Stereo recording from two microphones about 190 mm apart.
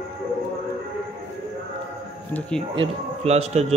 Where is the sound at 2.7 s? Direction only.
35° right (ahead or behind).